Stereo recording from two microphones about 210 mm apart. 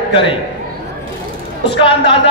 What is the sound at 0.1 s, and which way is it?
Speech, 25° left (ahead or behind).